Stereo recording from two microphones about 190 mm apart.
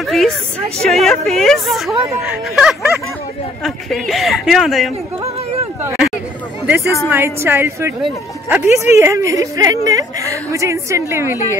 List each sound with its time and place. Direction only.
0.0 s speech: centre (ahead or behind)
5.8 s hubbub: 5° right (ahead or behind)
6.6 s a woman's voice: 10° right (ahead or behind)